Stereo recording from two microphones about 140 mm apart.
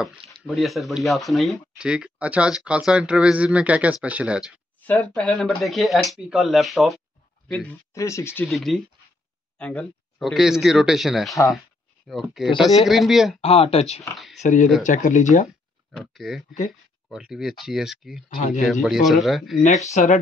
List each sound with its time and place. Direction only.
0.0 s speech: 5° right (ahead or behind)
4.8 s speech: 10° left (ahead or behind)
7.9 s speech: 20° left (ahead or behind)
8.5 s speech: centre (ahead or behind)
10.3 s speech: 5° right (ahead or behind)
13.4 s speech: 45° left (ahead or behind)
14.1 s speech: centre (ahead or behind)
14.4 s speech: 65° left (ahead or behind)
15.9 s speech: centre (ahead or behind)
19.9 s speech: 60° left (ahead or behind)